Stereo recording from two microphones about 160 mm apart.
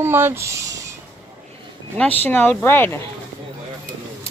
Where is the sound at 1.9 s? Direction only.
10° left (ahead or behind).